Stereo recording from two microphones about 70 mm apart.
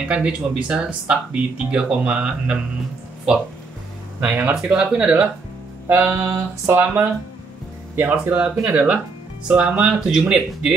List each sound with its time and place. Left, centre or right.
0.1 s speech: centre
4.2 s speech: right
5.9 s a sound: right
6.8 s speech: right; by 10.7 s centre